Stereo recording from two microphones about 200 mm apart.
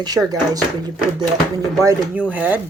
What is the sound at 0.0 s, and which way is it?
Speech, 20° right (ahead or behind).